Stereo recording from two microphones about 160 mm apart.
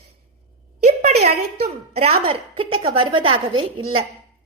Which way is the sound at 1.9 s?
40° right (ahead or behind).